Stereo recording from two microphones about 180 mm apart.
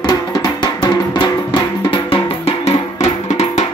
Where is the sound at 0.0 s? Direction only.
20° left (ahead or behind).